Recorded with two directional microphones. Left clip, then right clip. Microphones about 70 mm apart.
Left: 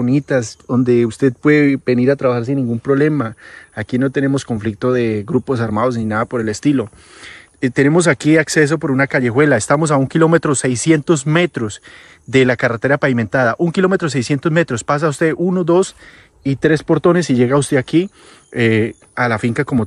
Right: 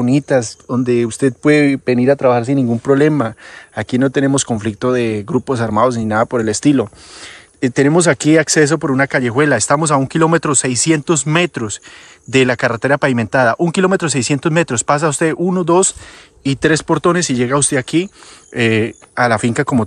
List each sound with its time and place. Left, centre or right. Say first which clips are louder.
0.0 s speech: right 2 dB; right
0.7 s speech: left 1 dB; centre; by 2.2 s right
2.9 s speech: right 2 dB; right
4.7 s speech: even; right
5.7 s speech: right 4 dB; right
6.4 s speech: right 3 dB; right
7.9 s speech: right 2 dB; right
8.8 s speech: right 1 dB; right
9.2 s speech: even; centre
18.5 s speech: even; right
19.1 s speech: right 3 dB; right